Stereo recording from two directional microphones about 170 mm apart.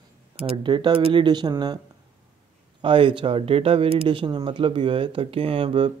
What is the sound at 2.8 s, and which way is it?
Speech, 30° right (ahead or behind).